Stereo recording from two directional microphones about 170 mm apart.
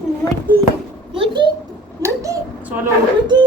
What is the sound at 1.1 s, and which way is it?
Speech, 30° right (ahead or behind).